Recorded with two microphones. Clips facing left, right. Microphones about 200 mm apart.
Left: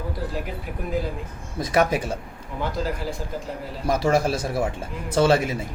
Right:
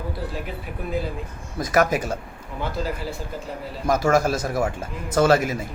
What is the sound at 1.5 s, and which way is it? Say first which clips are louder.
Speech: right 1 dB; 30° left (ahead or behind).